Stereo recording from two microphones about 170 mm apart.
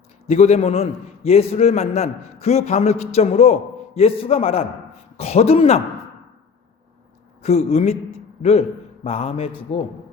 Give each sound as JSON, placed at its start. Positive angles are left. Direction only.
{"t": 0.3, "sound": "a man's voice", "side_deg": 40}
{"t": 7.4, "sound": "a man's voice", "side_deg": 40}